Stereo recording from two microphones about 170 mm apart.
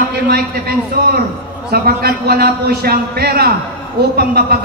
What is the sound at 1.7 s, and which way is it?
A man's voice, 65° right (ahead or behind).